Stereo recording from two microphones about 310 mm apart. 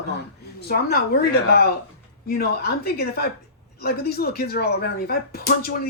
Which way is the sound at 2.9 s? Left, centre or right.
Left.